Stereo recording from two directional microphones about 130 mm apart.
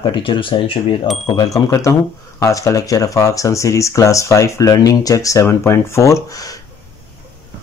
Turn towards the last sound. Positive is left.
turn(degrees=25)  # may be behind; listen again after turning